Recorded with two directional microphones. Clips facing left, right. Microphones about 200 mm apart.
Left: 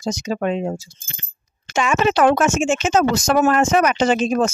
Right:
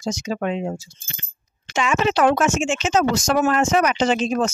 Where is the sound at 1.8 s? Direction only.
50° left (ahead or behind).